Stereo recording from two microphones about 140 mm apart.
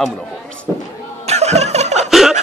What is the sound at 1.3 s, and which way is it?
Music, 50° right (ahead or behind).